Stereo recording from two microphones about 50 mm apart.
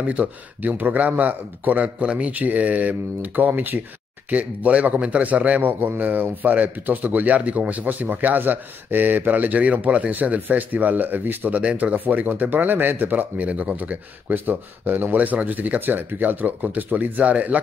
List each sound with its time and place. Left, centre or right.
0.0 s a man's voice: right
11.5 s a man's voice: right
14.3 s a man's voice: right